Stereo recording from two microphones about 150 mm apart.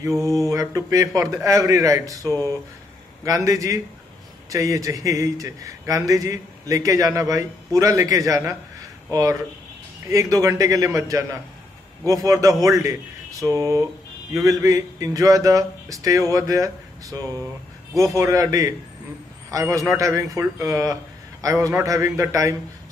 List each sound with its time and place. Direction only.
0.0 s a man's voice: 20° right (ahead or behind)